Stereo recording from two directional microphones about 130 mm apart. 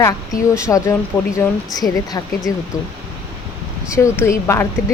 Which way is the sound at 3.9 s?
20° left (ahead or behind).